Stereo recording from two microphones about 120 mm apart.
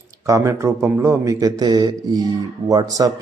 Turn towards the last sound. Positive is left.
turn(degrees=-30)  # may be behind; listen again after turning